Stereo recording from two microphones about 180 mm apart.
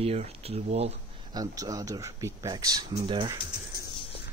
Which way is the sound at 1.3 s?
20° right (ahead or behind).